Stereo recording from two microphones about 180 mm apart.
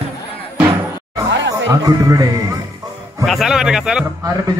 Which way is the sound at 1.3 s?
90° right.